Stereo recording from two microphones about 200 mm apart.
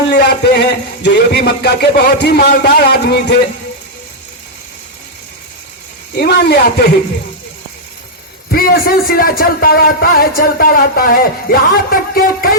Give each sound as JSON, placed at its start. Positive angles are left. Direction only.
{"t": 0.1, "sound": "a man's voice", "side_deg": 50}
{"t": 6.1, "sound": "a man's voice", "side_deg": 50}
{"t": 8.4, "sound": "a man's voice", "side_deg": 50}